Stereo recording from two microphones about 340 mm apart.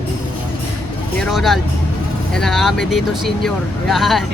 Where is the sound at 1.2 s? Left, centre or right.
Centre.